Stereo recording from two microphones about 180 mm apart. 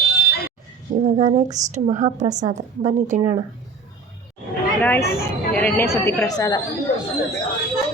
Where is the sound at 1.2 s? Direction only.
40° right (ahead or behind).